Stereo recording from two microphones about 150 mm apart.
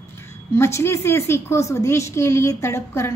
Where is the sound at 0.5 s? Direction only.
15° left (ahead or behind).